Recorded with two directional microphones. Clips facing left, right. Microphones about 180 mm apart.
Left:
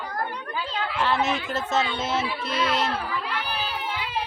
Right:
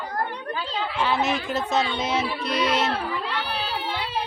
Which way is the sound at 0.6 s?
Centre (ahead or behind).